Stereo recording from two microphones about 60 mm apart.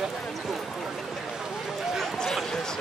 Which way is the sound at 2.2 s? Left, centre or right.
Centre.